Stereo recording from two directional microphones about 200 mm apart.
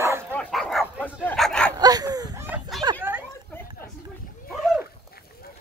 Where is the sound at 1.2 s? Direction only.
5° left (ahead or behind).